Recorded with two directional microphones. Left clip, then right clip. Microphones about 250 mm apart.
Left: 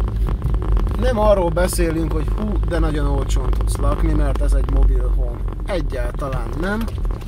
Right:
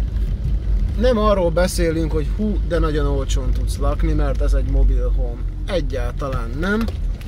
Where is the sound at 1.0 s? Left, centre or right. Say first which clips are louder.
Even; centre.